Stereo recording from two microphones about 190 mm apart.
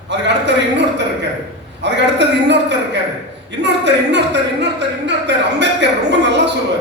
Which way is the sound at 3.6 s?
65° right (ahead or behind).